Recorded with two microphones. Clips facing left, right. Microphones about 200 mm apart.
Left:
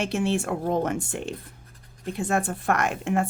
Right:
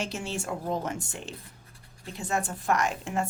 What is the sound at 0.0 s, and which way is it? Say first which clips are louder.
Speech: left 8 dB; 60° left (ahead or behind).